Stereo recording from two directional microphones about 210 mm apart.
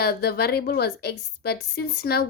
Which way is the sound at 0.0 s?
50° left (ahead or behind).